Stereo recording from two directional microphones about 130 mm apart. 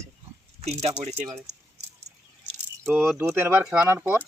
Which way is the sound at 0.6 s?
55° right (ahead or behind).